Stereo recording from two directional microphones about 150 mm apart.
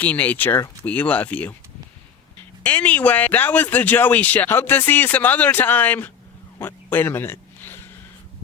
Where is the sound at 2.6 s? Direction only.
10° left (ahead or behind).